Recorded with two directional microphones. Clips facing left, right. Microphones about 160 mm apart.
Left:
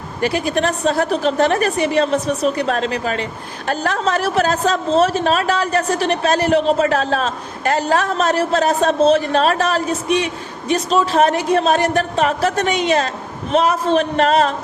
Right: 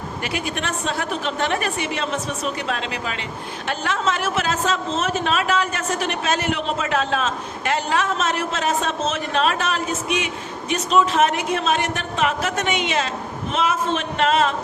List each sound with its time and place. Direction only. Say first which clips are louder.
0.2 s a woman's voice: left 10 dB; 35° left (ahead or behind)